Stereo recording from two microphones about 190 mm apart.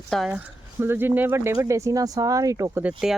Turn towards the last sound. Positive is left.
turn(degrees=-5)  # may be behind; listen again after turning